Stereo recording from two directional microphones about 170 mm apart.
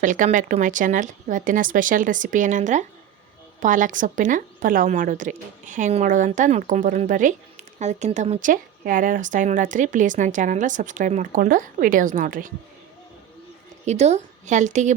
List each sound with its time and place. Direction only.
0.0 s a woman's voice: 50° right (ahead or behind)
13.8 s a woman's voice: 40° right (ahead or behind)